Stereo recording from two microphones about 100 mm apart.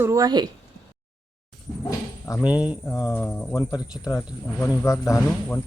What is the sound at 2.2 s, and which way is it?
Speech, 35° left (ahead or behind).